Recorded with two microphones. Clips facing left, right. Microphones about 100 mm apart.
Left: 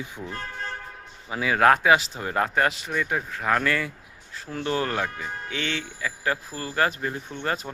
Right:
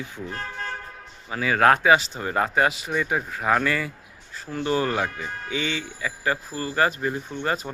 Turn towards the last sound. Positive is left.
turn(degrees=-5)  # may be behind; listen again after turning